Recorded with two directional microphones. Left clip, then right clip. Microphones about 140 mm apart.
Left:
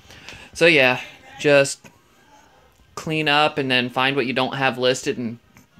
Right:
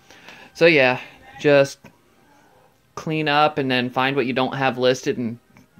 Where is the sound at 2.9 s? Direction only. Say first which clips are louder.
Left 1 dB; 10° right (ahead or behind).